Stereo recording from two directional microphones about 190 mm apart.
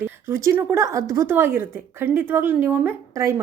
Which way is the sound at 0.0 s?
15° right (ahead or behind).